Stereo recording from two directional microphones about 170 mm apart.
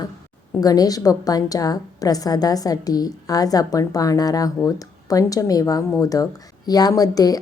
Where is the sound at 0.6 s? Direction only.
20° left (ahead or behind).